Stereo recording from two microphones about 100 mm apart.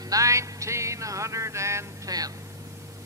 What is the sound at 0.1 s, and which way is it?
A man's voice, 30° right (ahead or behind).